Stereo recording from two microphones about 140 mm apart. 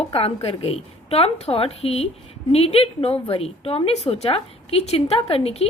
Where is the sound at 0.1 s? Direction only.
45° left (ahead or behind).